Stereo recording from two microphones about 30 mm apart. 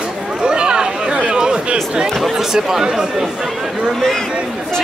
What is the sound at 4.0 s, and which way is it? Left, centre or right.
Speech, centre.